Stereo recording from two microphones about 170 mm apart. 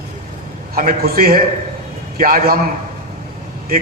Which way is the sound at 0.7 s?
55° right (ahead or behind).